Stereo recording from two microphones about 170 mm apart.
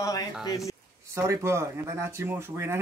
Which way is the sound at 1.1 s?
15° right (ahead or behind).